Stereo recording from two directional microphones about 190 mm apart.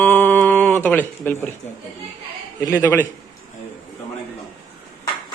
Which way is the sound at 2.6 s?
15° left (ahead or behind).